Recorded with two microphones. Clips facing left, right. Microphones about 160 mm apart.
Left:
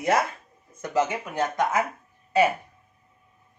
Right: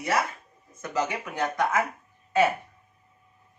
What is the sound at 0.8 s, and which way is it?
Speech, 20° left (ahead or behind).